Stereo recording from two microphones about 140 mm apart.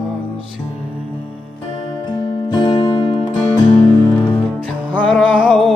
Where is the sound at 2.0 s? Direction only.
30° left (ahead or behind).